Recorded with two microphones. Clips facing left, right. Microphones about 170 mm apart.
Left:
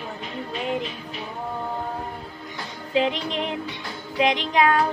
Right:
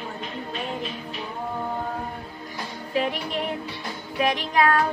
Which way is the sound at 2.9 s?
20° left (ahead or behind).